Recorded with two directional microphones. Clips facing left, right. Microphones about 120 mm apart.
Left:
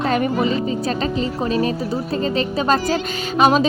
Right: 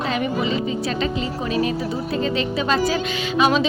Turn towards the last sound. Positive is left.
turn(degrees=45)  # may be behind; listen again after turning